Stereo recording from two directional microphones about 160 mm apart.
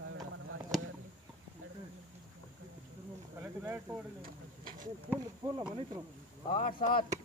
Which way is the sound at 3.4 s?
15° right (ahead or behind).